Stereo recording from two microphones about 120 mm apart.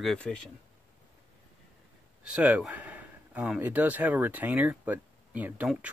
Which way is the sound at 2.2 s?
10° right (ahead or behind).